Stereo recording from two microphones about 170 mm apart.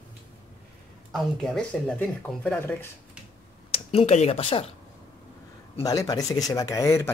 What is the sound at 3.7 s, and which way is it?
Speech, 35° left (ahead or behind).